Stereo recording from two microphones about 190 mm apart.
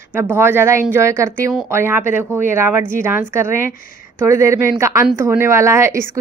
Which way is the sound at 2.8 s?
45° left (ahead or behind).